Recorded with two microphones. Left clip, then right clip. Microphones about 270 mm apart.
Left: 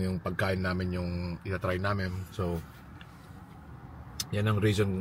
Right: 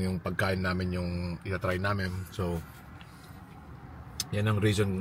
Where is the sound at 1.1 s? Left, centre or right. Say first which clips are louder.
Right 1 dB; right.